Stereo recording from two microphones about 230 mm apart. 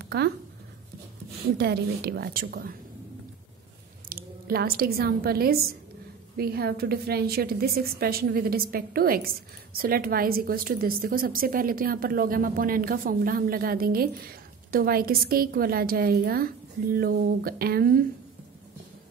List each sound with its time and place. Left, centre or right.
0.0 s a sound: right
1.6 s a woman's voice: right
4.1 s a woman's voice: right